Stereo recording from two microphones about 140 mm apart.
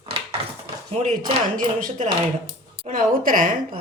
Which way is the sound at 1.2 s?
75° right (ahead or behind).